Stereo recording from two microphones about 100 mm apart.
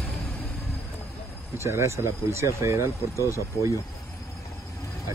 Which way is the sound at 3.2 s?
30° left (ahead or behind).